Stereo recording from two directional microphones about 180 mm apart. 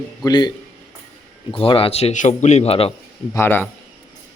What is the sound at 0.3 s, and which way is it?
A man's voice, 25° left (ahead or behind).